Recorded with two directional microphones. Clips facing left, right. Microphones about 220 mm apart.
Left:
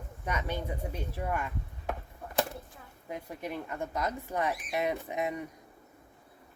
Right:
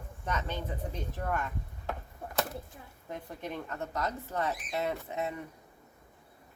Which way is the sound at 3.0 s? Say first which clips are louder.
Left 2 dB; 10° left (ahead or behind).